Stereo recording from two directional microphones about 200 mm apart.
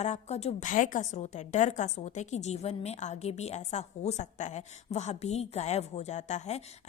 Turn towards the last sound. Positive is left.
turn(degrees=35)  # may be behind; listen again after turning